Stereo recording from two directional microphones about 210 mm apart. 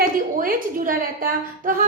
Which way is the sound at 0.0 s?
40° right (ahead or behind).